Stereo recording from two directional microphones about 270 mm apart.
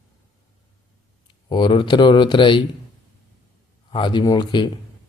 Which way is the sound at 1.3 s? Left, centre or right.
Centre.